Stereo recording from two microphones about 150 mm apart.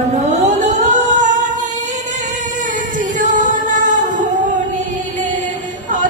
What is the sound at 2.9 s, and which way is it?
Singing, 60° right (ahead or behind).